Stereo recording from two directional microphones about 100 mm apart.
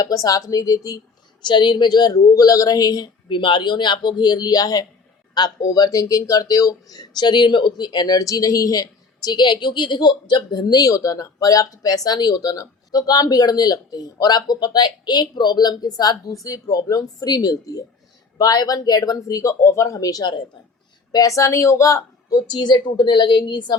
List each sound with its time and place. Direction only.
0.0 s speech: 35° left (ahead or behind)
1.5 s speech: 50° left (ahead or behind)
3.2 s speech: 55° left (ahead or behind)